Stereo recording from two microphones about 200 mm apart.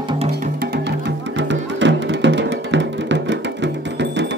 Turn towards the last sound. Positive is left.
turn(degrees=-60)  # may be behind; listen again after turning